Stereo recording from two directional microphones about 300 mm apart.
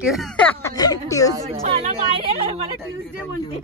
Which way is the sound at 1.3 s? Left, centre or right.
Centre.